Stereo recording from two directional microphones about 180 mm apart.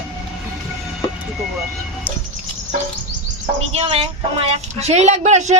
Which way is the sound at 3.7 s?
35° right (ahead or behind).